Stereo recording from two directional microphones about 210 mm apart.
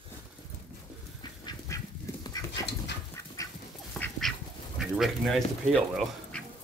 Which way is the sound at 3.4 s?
15° left (ahead or behind).